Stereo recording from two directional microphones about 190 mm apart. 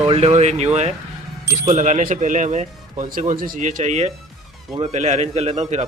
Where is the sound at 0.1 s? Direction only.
35° right (ahead or behind).